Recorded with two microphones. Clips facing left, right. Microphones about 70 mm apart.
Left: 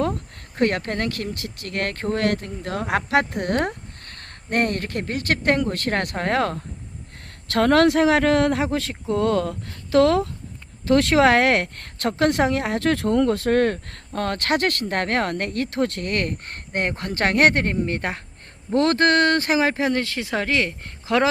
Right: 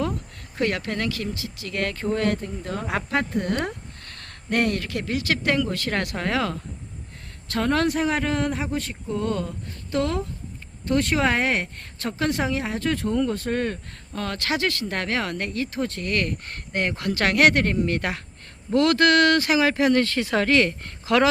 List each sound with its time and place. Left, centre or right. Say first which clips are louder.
0.5 s speech: left 3 dB; left
4.1 s speech: left 1 dB; left
7.4 s speech: left 6 dB; left
14.1 s speech: left 4 dB; left